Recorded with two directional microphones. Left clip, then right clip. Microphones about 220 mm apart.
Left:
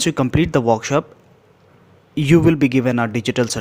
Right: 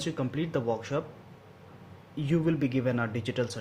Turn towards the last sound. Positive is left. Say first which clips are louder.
# left 12 dB
turn(degrees=45)  # may be behind; listen again after turning